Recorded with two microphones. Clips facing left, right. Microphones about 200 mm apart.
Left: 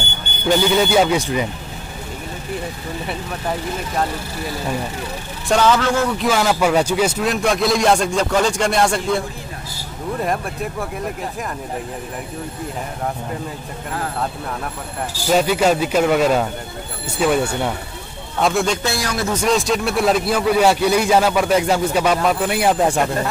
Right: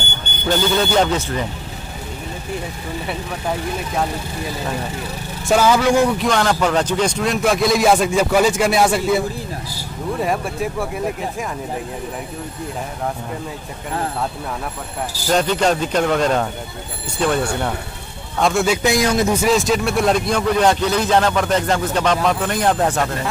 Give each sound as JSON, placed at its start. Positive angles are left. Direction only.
{"t": 0.5, "sound": "speech", "side_deg": 10}
{"t": 3.1, "sound": "a man's voice", "side_deg": 0}
{"t": 5.5, "sound": "speech", "side_deg": -10}
{"t": 6.1, "sound": "a man's voice", "side_deg": 5}
{"t": 15.2, "sound": "a man's voice", "side_deg": 10}
{"t": 18.8, "sound": "speech", "side_deg": -15}
{"t": 19.3, "sound": "speech", "side_deg": 0}